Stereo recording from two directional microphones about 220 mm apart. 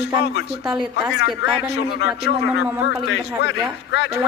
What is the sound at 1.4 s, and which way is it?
A man's voice, 55° left (ahead or behind).